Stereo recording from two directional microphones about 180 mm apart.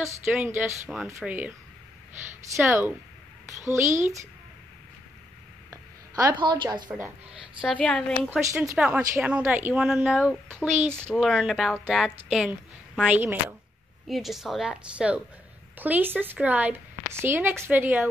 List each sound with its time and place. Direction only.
0.0 s a woman's voice: 15° right (ahead or behind)
2.5 s a woman's voice: 15° right (ahead or behind)
6.3 s a woman's voice: 25° right (ahead or behind)
7.6 s a woman's voice: 5° left (ahead or behind)